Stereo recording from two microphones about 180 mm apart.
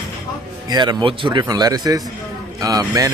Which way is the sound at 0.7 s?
25° right (ahead or behind).